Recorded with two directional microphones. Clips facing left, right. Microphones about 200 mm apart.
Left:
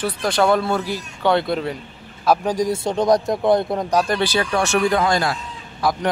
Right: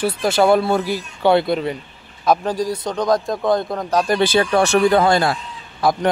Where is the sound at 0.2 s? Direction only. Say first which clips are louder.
Right 3 dB; 5° right (ahead or behind).